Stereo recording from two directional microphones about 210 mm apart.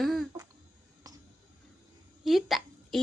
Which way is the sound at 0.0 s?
Centre (ahead or behind).